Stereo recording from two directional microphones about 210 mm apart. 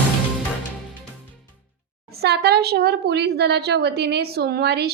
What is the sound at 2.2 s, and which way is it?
A woman's voice, 50° right (ahead or behind).